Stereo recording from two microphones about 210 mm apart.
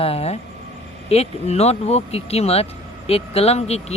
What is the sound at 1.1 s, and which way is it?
Speech, 30° left (ahead or behind).